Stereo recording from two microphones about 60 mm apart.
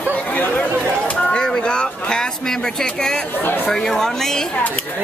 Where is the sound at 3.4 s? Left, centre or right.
Left.